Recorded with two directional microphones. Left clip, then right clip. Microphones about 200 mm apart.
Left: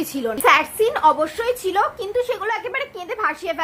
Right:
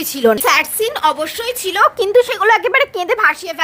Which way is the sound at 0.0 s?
45° right (ahead or behind).